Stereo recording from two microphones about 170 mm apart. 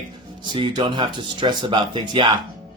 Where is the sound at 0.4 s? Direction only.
30° right (ahead or behind).